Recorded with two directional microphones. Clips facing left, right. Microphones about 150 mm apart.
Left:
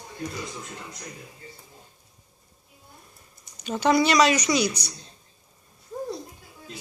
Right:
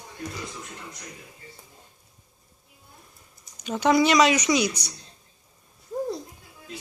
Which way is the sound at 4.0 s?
20° right (ahead or behind).